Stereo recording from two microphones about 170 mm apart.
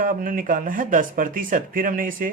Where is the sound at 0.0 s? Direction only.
55° right (ahead or behind).